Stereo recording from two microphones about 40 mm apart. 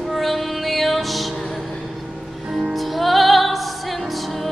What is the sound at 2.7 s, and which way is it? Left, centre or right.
Music, centre.